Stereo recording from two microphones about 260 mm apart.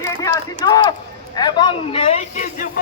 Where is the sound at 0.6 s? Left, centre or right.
Centre.